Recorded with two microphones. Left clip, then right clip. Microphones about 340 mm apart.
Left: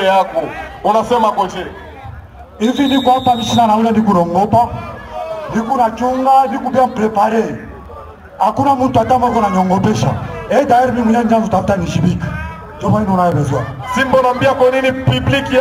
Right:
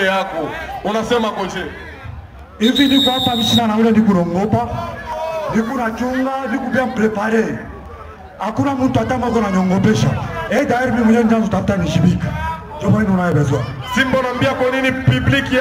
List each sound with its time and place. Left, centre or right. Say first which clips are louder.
0.0 s a man's voice: left 5 dB; left
13.4 s a man's voice: left 1 dB; left